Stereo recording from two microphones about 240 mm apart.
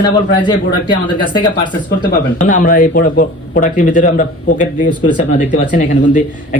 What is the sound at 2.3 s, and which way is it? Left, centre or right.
Speech, left.